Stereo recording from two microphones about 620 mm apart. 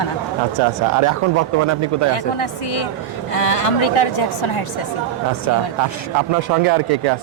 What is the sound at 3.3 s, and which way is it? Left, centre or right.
A woman's voice, left.